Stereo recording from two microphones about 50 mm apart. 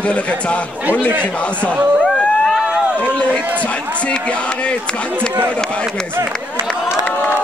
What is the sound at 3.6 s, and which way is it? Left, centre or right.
Speech, left.